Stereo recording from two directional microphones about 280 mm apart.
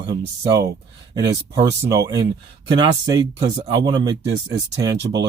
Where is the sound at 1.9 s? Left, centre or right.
Centre.